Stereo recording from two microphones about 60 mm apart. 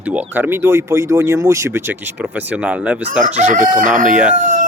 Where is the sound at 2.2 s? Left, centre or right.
Right.